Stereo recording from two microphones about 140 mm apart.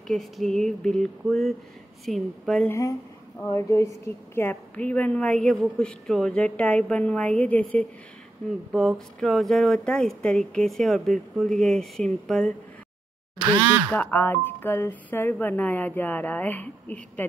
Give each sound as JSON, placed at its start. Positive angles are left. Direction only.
{"t": 0.1, "sound": "speech", "side_deg": 5}
{"t": 3.3, "sound": "a woman's voice", "side_deg": 20}
{"t": 13.5, "sound": "speech", "side_deg": -20}
{"t": 13.8, "sound": "a woman's voice", "side_deg": 15}